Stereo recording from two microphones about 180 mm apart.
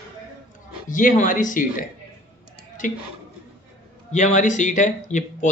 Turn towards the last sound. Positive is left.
turn(degrees=45)  # may be behind; listen again after turning